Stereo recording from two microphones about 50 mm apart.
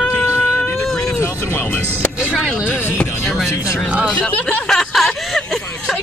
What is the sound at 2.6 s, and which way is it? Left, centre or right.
Speech, left.